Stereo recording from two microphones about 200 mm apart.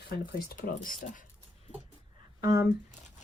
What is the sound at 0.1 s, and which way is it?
Speech, 50° left (ahead or behind).